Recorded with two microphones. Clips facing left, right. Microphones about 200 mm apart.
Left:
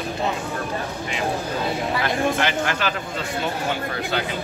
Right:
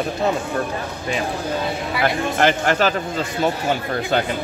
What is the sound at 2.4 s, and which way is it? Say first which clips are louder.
Speech: right 6 dB; 45° right (ahead or behind).